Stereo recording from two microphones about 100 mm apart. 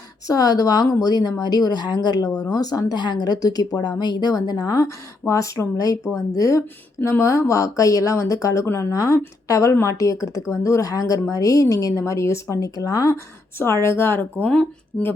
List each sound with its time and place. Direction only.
0.3 s speech: 40° left (ahead or behind)
13.8 s speech: 25° left (ahead or behind)
14.4 s speech: 10° left (ahead or behind)